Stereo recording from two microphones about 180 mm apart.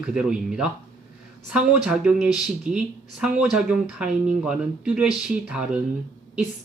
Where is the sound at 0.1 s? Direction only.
5° right (ahead or behind).